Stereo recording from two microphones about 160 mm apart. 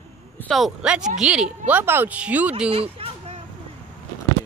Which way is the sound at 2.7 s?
35° right (ahead or behind).